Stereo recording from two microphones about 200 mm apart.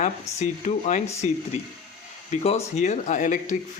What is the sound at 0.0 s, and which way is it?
Speech, 35° left (ahead or behind).